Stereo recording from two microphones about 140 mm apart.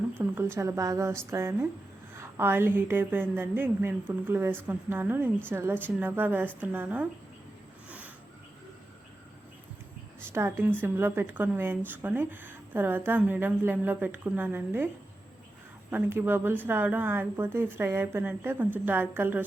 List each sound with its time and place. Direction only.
0.2 s a woman's voice: 15° right (ahead or behind)
10.3 s speech: 15° right (ahead or behind)
15.9 s speech: 15° right (ahead or behind)